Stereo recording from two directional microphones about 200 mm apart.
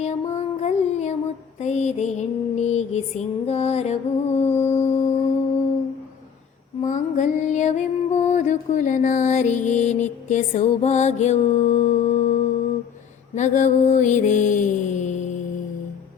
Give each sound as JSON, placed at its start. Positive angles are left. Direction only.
{"t": 0.0, "sound": "music", "side_deg": 35}
{"t": 6.8, "sound": "music", "side_deg": 40}